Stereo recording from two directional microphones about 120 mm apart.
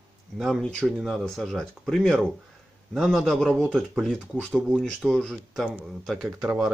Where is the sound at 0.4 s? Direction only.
5° left (ahead or behind).